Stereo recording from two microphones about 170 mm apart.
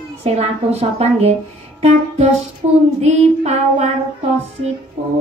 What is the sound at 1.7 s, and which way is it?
Music, 40° right (ahead or behind).